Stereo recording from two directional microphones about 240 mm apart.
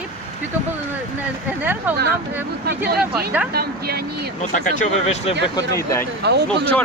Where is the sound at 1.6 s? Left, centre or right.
Centre.